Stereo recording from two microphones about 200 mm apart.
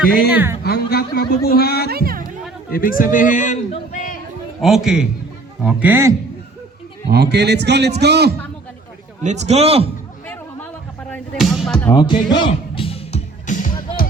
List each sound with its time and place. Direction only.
0.3 s speech: 10° right (ahead or behind)
0.6 s speech: 50° left (ahead or behind)
1.9 s music: 50° right (ahead or behind)
2.7 s a man's voice: 45° left (ahead or behind)
4.6 s a man's voice: centre (ahead or behind)
7.1 s a man's voice: 55° right (ahead or behind)
9.2 s a man's voice: 35° right (ahead or behind)
11.1 s music: centre (ahead or behind)
11.9 s speech: 20° left (ahead or behind)
12.4 s music: 25° left (ahead or behind)